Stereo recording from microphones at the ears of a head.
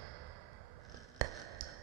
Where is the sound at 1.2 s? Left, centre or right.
Right.